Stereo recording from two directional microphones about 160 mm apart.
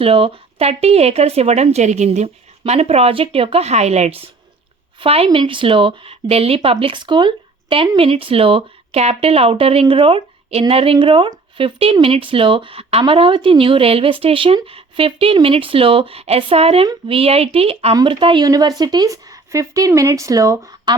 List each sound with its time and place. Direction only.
0.0 s speech: 35° right (ahead or behind)